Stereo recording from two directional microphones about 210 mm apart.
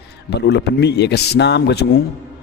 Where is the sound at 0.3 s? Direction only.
55° left (ahead or behind).